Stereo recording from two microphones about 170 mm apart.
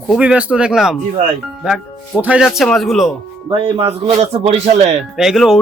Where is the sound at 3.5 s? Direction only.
30° right (ahead or behind).